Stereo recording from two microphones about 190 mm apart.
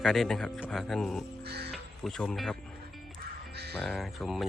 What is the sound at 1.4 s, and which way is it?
Speech, 60° right (ahead or behind).